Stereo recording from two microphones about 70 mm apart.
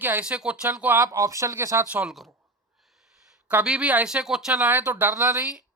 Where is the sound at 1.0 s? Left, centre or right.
Right.